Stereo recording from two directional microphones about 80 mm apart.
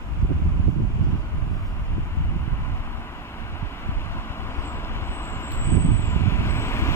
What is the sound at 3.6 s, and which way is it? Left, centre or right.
Vehicle, left.